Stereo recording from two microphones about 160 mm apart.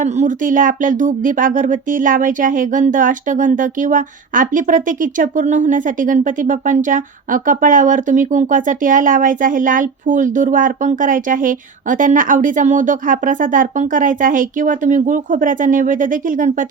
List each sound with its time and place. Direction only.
0.0 s speech: 50° right (ahead or behind)